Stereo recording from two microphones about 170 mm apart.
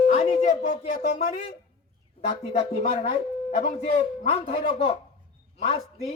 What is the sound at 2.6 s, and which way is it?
Speech, 35° left (ahead or behind).